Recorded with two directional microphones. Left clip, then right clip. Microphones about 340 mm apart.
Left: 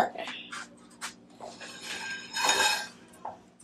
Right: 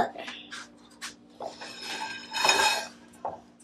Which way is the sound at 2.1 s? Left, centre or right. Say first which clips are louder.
Right 3 dB; right.